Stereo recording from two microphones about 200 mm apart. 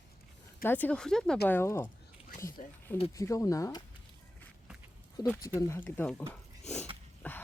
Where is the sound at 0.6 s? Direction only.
10° left (ahead or behind).